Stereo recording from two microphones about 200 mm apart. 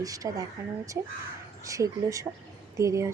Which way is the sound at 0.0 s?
15° right (ahead or behind).